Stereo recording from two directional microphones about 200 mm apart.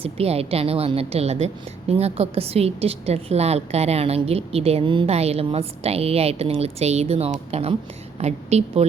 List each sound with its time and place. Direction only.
0.0 s a woman's voice: 30° right (ahead or behind)